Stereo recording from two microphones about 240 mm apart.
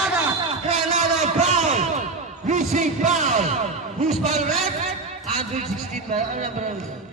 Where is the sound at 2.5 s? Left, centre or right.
Right.